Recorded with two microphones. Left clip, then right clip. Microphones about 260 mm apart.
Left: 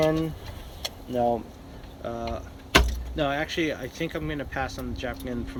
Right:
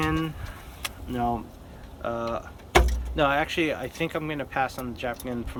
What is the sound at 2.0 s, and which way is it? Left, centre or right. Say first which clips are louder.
Speech: right 3 dB; centre.